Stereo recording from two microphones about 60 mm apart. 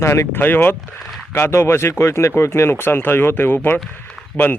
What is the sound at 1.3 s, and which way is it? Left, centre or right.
Speech, left.